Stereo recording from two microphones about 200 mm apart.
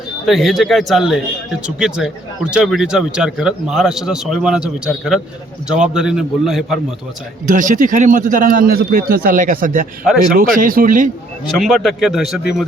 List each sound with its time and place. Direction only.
0.3 s speech: centre (ahead or behind)
7.4 s a man's voice: 40° right (ahead or behind)
11.5 s speech: centre (ahead or behind)